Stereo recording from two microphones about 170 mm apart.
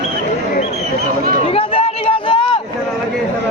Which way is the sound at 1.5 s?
35° left (ahead or behind).